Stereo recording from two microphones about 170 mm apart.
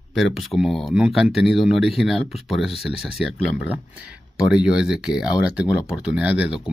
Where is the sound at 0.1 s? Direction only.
Centre (ahead or behind).